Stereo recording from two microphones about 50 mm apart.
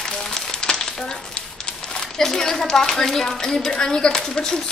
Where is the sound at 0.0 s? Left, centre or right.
Centre.